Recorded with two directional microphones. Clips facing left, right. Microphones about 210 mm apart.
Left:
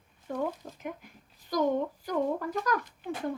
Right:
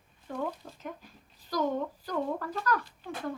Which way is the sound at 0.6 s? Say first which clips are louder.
Left 3 dB; 15° left (ahead or behind).